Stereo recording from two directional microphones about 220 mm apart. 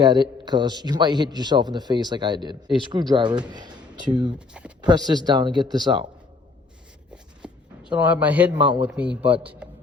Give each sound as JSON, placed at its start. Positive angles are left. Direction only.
{"t": 0.0, "sound": "a man's voice", "side_deg": -20}
{"t": 4.4, "sound": "speech", "side_deg": -5}
{"t": 4.8, "sound": "a man's voice", "side_deg": -20}
{"t": 7.1, "sound": "writing", "side_deg": -5}
{"t": 8.8, "sound": "speech", "side_deg": -5}